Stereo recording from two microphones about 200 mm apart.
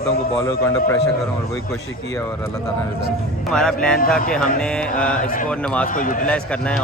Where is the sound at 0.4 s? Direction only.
15° left (ahead or behind).